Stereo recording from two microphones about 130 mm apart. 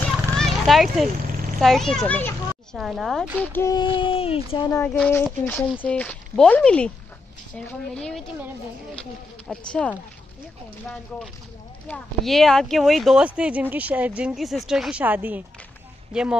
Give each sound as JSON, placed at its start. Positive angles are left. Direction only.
{"t": 0.0, "sound": "a sound", "side_deg": 0}
{"t": 1.6, "sound": "a child's voice", "side_deg": 0}
{"t": 2.8, "sound": "speech", "side_deg": 0}
{"t": 3.3, "sound": "speech", "side_deg": 15}
{"t": 3.7, "sound": "speech", "side_deg": 40}
{"t": 4.8, "sound": "speech", "side_deg": 10}
{"t": 9.5, "sound": "speech", "side_deg": 5}
{"t": 11.9, "sound": "speech", "side_deg": 0}